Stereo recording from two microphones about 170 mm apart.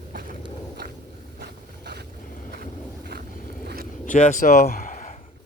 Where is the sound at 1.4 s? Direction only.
75° right (ahead or behind).